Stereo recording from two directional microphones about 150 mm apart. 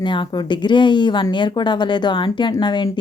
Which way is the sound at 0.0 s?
30° left (ahead or behind).